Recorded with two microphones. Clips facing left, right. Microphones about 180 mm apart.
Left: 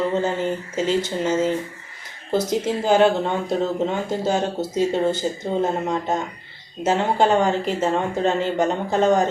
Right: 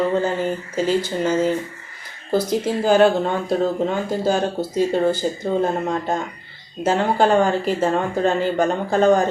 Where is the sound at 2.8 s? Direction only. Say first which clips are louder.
Right 2 dB; 20° left (ahead or behind).